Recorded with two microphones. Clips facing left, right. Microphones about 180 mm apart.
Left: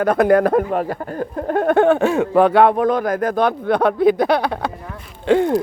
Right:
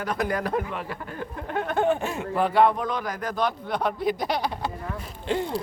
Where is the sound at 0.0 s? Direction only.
55° left (ahead or behind).